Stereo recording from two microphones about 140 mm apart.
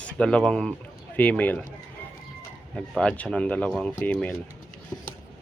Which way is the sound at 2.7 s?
5° left (ahead or behind).